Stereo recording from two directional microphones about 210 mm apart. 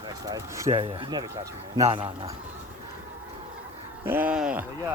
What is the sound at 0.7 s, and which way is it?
Speech, 25° right (ahead or behind).